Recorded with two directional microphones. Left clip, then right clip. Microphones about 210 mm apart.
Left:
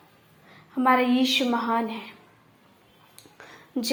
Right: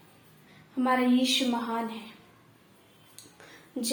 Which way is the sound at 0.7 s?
25° left (ahead or behind).